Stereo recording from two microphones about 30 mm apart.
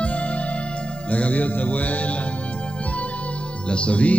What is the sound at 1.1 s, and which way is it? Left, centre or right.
Music, left.